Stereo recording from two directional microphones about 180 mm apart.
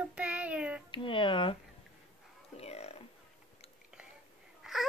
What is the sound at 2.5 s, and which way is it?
Burping, 35° left (ahead or behind).